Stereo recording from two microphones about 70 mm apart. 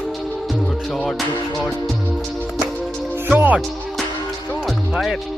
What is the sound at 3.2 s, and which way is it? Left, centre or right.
Music, right.